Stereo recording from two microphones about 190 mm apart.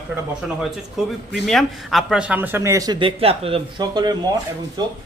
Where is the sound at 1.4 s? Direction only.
Centre (ahead or behind); by 4.1 s 20° right (ahead or behind).